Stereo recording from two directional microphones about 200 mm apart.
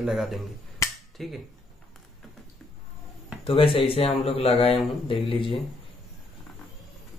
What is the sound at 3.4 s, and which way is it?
Speech, 25° left (ahead or behind).